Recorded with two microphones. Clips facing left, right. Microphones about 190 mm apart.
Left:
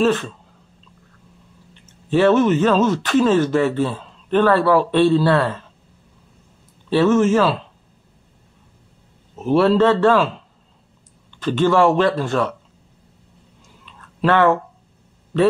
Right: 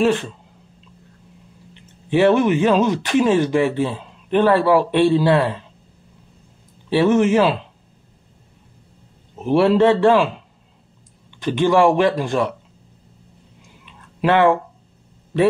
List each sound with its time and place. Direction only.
0.0 s speech: 15° right (ahead or behind)
1.7 s speech: 15° right (ahead or behind)
6.9 s speech: 15° right (ahead or behind)
9.4 s speech: 15° right (ahead or behind)
11.4 s speech: 15° right (ahead or behind)
13.8 s a sound: 15° right (ahead or behind)